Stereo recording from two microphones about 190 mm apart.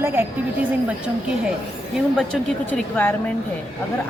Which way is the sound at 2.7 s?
10° left (ahead or behind).